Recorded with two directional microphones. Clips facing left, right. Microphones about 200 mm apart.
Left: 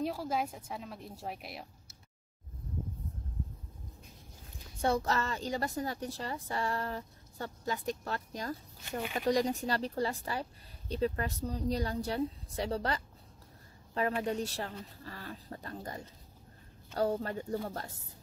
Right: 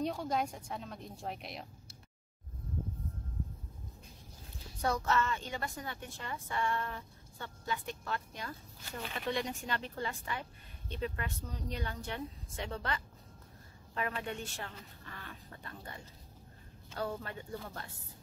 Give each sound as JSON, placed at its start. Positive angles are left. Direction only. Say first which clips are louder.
{"t": 0.0, "sound": "a woman's voice", "louder": "left 1 dB", "side_deg": 5}
{"t": 4.8, "sound": "a woman's voice", "louder": "left 2 dB", "side_deg": 35}
{"t": 14.2, "sound": "a woman's voice", "louder": "left 7 dB", "side_deg": 35}